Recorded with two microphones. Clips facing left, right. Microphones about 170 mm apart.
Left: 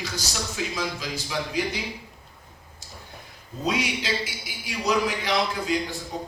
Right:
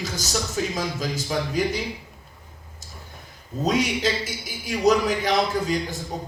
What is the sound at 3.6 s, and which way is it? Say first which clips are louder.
A man's voice: right 4 dB; 45° right (ahead or behind).